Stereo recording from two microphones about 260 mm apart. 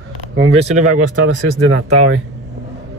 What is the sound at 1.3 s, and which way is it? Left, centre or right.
Speech, right.